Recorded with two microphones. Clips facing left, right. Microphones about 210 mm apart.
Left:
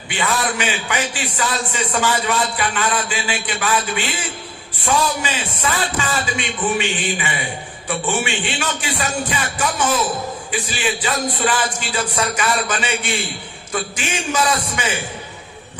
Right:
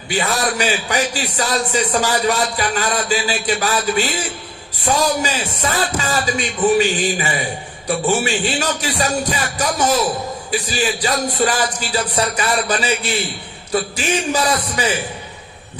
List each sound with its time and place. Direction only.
0.1 s speech: 40° right (ahead or behind)